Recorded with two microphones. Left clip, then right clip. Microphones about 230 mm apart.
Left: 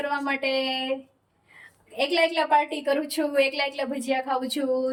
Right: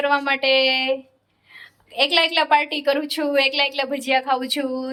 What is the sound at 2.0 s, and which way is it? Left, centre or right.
Speech, centre.